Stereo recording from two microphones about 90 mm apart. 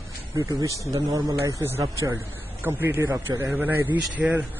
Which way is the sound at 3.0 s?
35° right (ahead or behind).